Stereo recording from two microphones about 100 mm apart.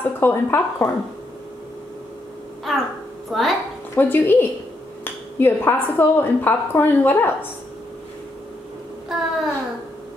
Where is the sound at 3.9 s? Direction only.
20° left (ahead or behind).